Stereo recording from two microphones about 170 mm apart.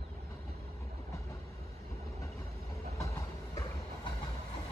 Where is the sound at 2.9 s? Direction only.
20° left (ahead or behind).